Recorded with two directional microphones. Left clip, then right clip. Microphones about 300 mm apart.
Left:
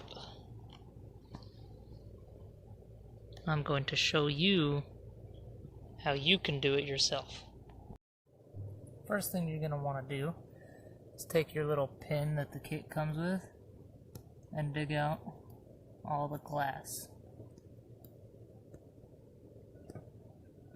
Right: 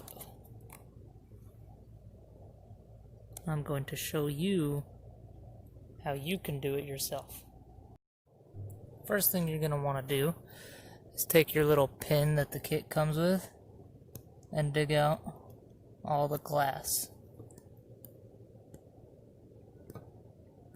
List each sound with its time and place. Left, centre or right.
3.4 s speech: centre
6.0 s speech: centre
9.0 s speech: right
14.5 s speech: right